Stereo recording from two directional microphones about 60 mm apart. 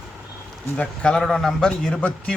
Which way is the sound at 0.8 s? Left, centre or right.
Centre.